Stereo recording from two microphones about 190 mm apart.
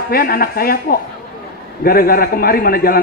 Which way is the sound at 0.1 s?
50° left (ahead or behind).